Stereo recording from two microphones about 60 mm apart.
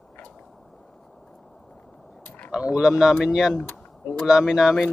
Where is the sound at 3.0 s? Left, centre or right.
Centre.